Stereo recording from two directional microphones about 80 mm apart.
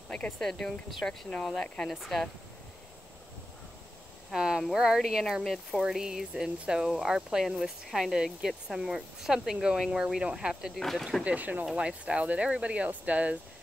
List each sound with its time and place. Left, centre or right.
0.1 s speech: centre
4.3 s speech: centre
5.8 s speech: centre
11.2 s speech: right